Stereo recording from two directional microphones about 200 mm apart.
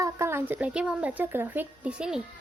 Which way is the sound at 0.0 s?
15° right (ahead or behind).